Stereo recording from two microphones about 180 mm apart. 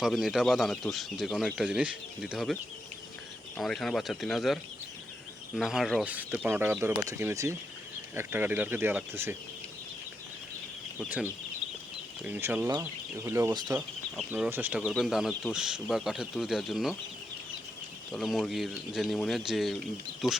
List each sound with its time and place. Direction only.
0.0 s speech: centre (ahead or behind)
3.6 s speech: centre (ahead or behind)
12.2 s speech: 10° right (ahead or behind)
13.7 s speech: 10° right (ahead or behind)
18.1 s speech: centre (ahead or behind)